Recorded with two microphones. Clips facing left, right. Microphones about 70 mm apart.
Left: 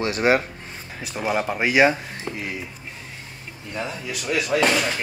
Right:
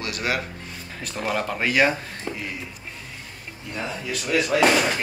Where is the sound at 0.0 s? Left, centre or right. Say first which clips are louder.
Left 7 dB; left.